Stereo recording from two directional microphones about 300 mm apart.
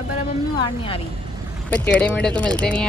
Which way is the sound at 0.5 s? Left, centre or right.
Centre.